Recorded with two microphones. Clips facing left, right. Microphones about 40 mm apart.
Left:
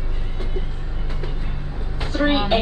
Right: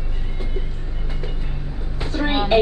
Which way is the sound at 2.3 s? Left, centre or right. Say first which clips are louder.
Right 2 dB; centre.